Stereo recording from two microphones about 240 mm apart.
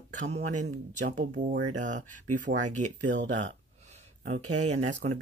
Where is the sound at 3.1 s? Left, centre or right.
Right.